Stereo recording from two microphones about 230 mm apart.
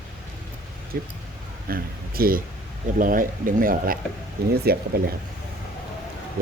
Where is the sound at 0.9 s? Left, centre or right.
Right.